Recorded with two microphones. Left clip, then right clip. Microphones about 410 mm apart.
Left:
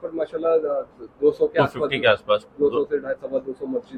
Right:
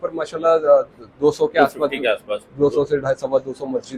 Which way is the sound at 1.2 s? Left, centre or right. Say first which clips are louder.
Right 3 dB; right.